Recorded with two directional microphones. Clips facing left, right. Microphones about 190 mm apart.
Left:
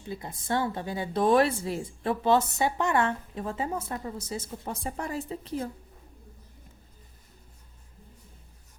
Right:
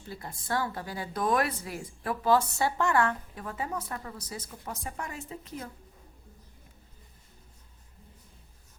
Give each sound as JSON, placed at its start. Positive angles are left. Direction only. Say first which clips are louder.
{"t": 0.0, "sound": "speech", "louder": "left 4 dB", "side_deg": 20}